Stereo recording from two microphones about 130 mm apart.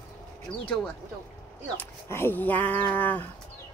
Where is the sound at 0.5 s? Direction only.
40° left (ahead or behind).